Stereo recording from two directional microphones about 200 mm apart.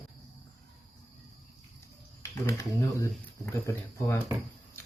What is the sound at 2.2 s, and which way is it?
Speech, 15° left (ahead or behind).